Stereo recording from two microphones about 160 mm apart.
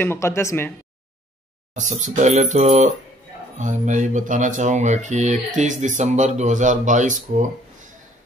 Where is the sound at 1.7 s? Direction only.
50° right (ahead or behind).